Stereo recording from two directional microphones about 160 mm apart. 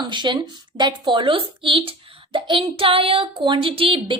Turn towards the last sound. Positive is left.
turn(degrees=-35)  # may be behind; listen again after turning